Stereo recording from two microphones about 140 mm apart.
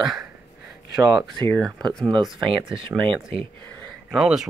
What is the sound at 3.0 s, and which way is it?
Speech, 40° right (ahead or behind).